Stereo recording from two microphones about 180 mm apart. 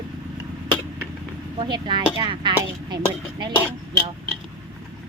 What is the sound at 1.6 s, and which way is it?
Speech, 25° right (ahead or behind).